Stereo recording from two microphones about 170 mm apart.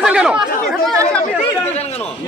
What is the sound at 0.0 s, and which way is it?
Chatter, 5° right (ahead or behind).